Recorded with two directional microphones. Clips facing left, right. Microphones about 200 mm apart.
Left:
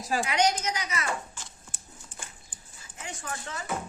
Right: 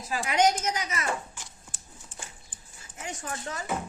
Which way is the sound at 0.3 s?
45° right (ahead or behind).